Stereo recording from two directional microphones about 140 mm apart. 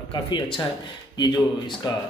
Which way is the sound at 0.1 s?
35° left (ahead or behind).